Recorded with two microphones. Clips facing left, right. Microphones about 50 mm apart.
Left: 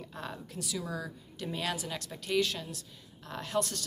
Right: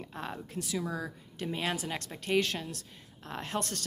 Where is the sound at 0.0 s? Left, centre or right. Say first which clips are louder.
Right 2 dB; right.